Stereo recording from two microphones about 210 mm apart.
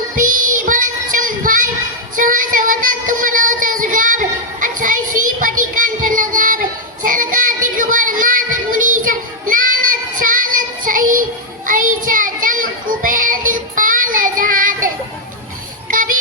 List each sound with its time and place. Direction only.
0.2 s child singing: 40° right (ahead or behind)
15.9 s child singing: 40° right (ahead or behind)